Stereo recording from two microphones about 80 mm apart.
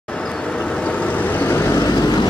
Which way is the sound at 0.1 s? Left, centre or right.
Centre.